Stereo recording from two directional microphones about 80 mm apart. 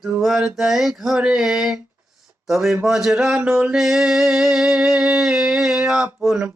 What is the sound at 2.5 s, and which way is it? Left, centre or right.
Music, centre.